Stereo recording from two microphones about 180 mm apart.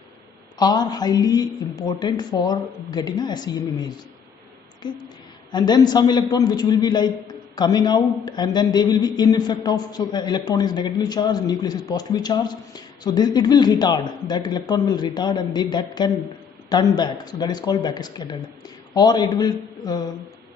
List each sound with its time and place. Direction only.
0.6 s a man's voice: 20° left (ahead or behind)
5.5 s a man's voice: 20° left (ahead or behind)